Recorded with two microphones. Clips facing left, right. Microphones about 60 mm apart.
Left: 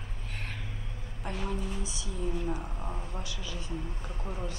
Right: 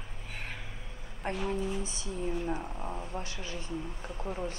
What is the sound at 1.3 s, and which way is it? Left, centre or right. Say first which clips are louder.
Speech: right 3 dB; right.